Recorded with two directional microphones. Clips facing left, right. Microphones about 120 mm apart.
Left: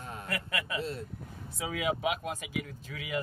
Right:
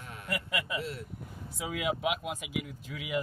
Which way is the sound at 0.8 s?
25° left (ahead or behind).